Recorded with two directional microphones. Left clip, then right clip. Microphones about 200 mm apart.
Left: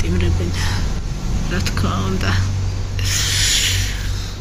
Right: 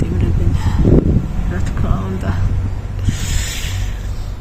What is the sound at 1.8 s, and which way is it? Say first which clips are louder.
Speech: left 1 dB; centre (ahead or behind).